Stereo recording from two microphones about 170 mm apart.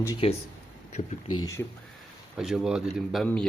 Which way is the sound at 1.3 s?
20° left (ahead or behind).